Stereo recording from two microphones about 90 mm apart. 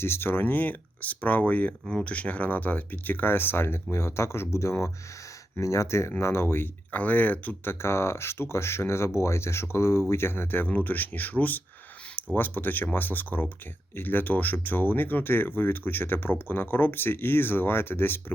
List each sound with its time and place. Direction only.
0.0 s speech: 25° left (ahead or behind)
1.9 s speech: 5° left (ahead or behind)
2.1 s speech: 15° left (ahead or behind)